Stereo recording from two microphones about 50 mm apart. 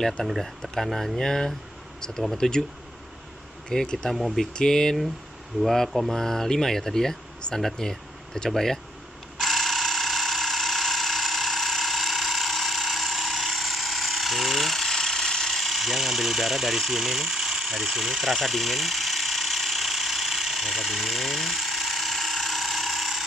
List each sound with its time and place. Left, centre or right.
0.2 s speech: centre
0.7 s speech: centre
3.6 s speech: centre
4.1 s speech: centre
4.6 s speech: centre
5.6 s speech: centre
9.4 s a sound: centre